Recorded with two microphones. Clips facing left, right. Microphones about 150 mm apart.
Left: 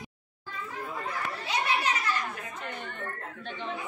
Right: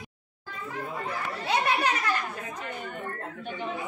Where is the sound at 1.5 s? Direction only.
55° right (ahead or behind).